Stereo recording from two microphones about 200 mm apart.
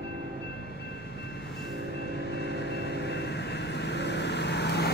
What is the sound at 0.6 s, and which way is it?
Vehicle, 55° left (ahead or behind).